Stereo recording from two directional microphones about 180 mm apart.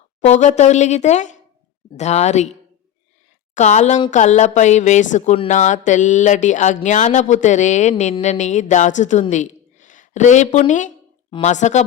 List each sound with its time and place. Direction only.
0.3 s a woman's voice: 40° left (ahead or behind)
3.5 s a woman's voice: 40° left (ahead or behind)